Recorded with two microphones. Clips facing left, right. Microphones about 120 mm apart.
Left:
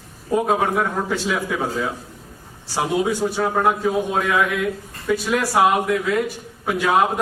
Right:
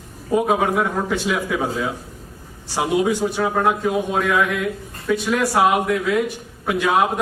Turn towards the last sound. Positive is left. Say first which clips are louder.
# even
turn(degrees=0)  # may be behind; listen again after turning